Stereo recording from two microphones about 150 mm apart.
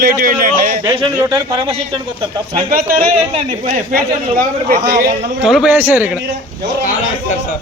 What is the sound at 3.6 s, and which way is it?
A man's voice, 60° right (ahead or behind).